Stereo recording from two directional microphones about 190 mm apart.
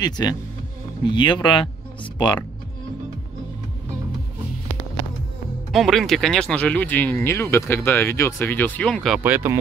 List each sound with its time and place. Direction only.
0.0 s speech: 20° left (ahead or behind)
5.7 s speech: centre (ahead or behind)
9.2 s speech: 10° right (ahead or behind)